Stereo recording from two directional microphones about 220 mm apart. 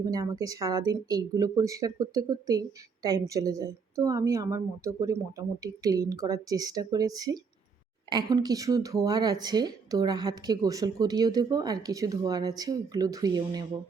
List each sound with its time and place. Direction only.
0.0 s speech: 15° right (ahead or behind)